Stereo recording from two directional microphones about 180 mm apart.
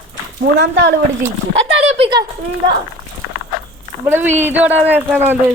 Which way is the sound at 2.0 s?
25° right (ahead or behind).